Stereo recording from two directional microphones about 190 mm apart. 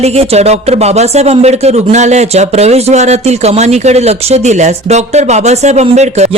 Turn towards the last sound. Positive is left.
turn(degrees=-35)  # may be behind; listen again after turning